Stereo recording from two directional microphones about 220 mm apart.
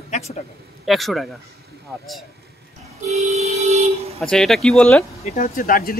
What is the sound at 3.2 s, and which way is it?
Vehicle, 30° right (ahead or behind).